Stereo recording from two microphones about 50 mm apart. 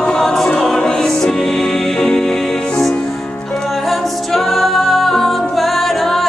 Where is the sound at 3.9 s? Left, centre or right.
Centre.